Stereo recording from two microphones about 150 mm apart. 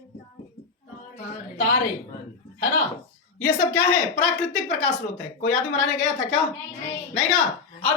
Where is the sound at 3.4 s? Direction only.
15° left (ahead or behind).